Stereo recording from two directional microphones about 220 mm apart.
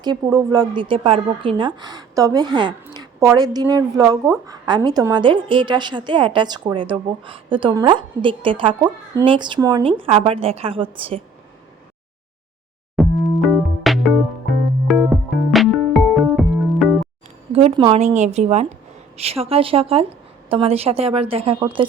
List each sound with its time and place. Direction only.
0.0 s a woman's voice: 15° right (ahead or behind)
2.8 s a sound: 15° right (ahead or behind)
3.7 s a woman's voice: 15° right (ahead or behind)
13.0 s music: centre (ahead or behind)
17.5 s a woman's voice: 30° right (ahead or behind)